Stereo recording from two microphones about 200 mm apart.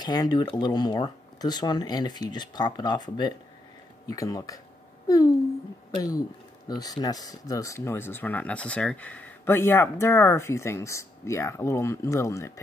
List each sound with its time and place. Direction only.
0.0 s speech: 20° left (ahead or behind)